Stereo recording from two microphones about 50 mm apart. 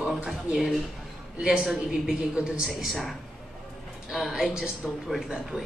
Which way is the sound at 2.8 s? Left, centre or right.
Centre.